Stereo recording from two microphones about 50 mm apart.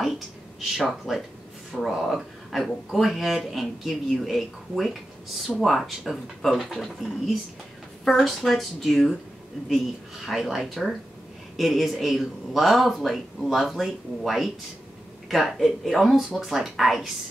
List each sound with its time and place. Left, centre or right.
0.0 s a sound: centre
0.8 s speech: centre
10.2 s speech: centre